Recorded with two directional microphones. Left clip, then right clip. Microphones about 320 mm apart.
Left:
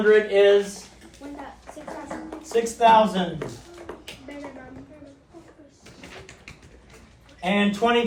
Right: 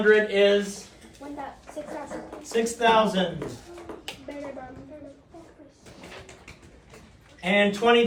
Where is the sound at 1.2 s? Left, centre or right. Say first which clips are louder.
Even; right.